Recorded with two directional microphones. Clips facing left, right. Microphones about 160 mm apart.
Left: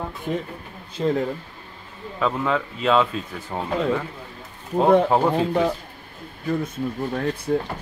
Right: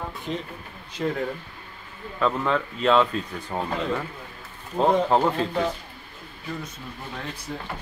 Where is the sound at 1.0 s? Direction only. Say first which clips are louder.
Left 4 dB; 25° left (ahead or behind).